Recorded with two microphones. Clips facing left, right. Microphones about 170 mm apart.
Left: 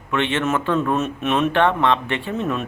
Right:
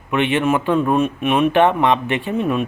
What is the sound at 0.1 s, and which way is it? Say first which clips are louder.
A man's voice: right 4 dB; 15° right (ahead or behind).